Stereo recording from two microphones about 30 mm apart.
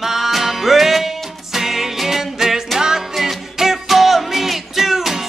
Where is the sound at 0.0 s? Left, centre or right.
Centre.